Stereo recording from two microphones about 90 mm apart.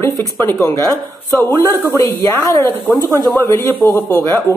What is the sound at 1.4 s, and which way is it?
Speech, 45° right (ahead or behind).